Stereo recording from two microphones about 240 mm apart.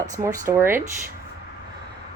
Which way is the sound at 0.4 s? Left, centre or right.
Centre.